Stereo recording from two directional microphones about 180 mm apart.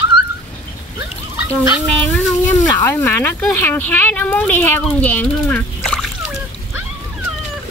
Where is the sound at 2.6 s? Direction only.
15° left (ahead or behind).